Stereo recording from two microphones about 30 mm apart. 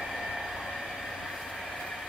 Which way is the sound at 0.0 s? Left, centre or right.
Centre.